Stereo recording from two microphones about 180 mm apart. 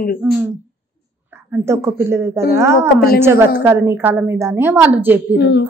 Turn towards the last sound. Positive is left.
turn(degrees=75)  # may be behind; listen again after turning